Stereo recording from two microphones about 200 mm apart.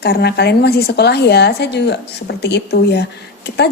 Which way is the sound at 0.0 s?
55° left (ahead or behind).